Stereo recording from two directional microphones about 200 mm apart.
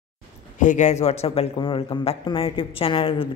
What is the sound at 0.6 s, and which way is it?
Speech, 35° left (ahead or behind).